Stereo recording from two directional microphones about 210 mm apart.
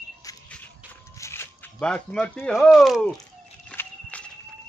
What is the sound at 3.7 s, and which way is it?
Horse, 5° left (ahead or behind).